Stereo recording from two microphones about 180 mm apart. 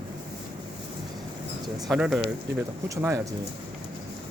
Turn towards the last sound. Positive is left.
turn(degrees=-15)  # may be behind; listen again after turning